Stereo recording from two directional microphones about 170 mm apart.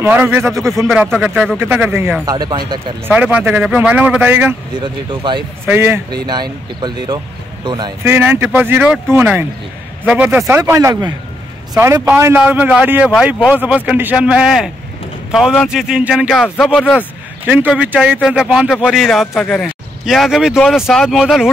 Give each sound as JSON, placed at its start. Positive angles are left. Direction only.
{"t": 0.0, "sound": "speech", "side_deg": -10}
{"t": 2.2, "sound": "speech", "side_deg": -25}
{"t": 3.2, "sound": "speech", "side_deg": -10}
{"t": 4.7, "sound": "speech", "side_deg": -25}
{"t": 5.7, "sound": "speech", "side_deg": -15}
{"t": 6.2, "sound": "speech", "side_deg": -25}
{"t": 8.0, "sound": "speech", "side_deg": -10}